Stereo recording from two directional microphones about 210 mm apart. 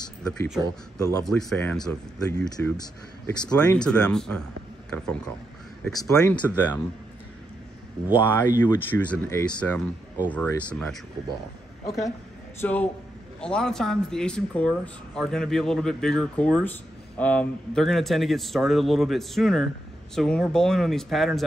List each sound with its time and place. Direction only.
0.2 s speech: 5° left (ahead or behind)
0.9 s speech: 15° left (ahead or behind)
1.2 s speech: 5° left (ahead or behind)
2.8 s speech: 20° left (ahead or behind)
3.5 s speech: 5° left (ahead or behind)
5.9 s speech: 15° left (ahead or behind)
8.2 s speech: 10° left (ahead or behind)
12.5 s speech: 10° left (ahead or behind)